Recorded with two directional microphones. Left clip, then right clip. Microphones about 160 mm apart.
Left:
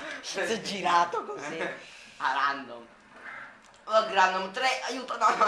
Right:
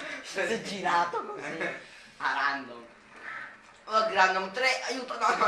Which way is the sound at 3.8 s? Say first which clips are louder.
Left 1 dB; 50° left (ahead or behind).